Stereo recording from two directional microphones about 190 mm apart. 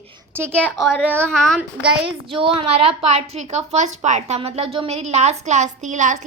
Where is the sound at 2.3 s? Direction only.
30° right (ahead or behind).